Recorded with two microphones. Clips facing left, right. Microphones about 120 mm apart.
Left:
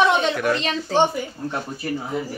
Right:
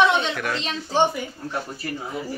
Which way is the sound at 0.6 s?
60° left (ahead or behind).